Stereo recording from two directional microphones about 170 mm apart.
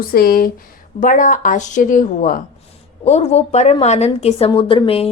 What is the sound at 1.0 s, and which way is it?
A woman's voice, 50° left (ahead or behind).